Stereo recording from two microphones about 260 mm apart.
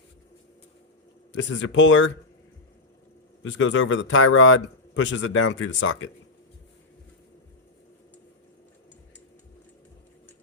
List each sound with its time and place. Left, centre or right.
1.5 s a man's voice: left
3.4 s a man's voice: left